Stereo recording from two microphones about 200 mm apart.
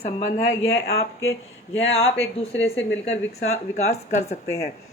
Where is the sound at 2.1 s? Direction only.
30° left (ahead or behind).